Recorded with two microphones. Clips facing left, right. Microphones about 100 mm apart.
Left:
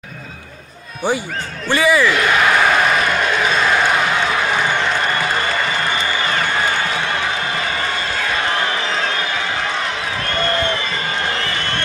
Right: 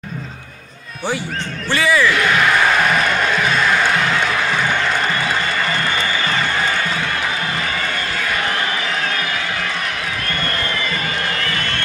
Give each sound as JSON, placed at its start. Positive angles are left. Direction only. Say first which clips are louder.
{"t": 1.7, "sound": "speech", "louder": "left 2 dB", "side_deg": 15}